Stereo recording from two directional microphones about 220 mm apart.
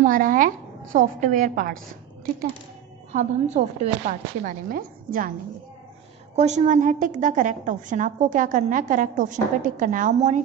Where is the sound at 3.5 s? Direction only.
30° right (ahead or behind).